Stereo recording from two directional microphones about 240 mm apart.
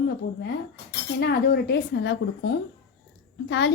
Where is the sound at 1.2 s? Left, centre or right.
Left.